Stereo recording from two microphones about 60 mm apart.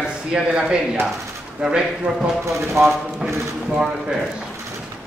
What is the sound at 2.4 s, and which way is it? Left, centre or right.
Speech, right.